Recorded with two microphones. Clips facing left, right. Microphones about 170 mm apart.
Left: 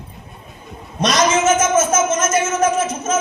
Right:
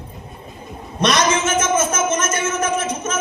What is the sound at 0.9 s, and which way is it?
A man's voice, 60° right (ahead or behind).